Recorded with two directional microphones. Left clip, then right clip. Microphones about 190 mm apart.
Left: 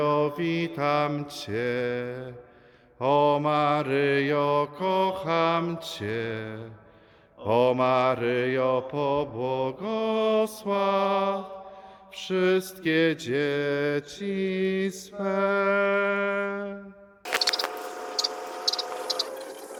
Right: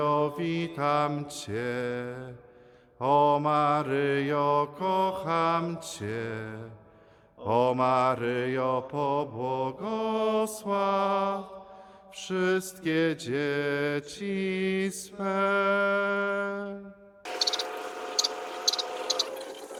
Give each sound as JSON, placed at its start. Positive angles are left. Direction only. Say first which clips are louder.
{"t": 0.0, "sound": "mantra", "louder": "left 2 dB", "side_deg": 15}
{"t": 15.2, "sound": "music", "louder": "left 1 dB", "side_deg": 5}
{"t": 17.5, "sound": "a sound", "louder": "left 2 dB", "side_deg": 0}